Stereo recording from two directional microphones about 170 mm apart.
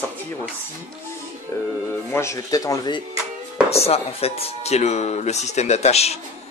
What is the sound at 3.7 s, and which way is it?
Speech, 35° left (ahead or behind).